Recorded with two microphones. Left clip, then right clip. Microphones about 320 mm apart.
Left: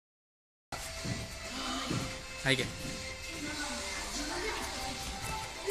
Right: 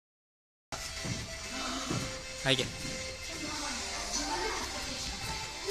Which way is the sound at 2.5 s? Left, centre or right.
Centre.